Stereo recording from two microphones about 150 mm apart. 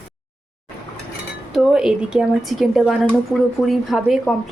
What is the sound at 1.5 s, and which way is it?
A woman's voice, centre (ahead or behind).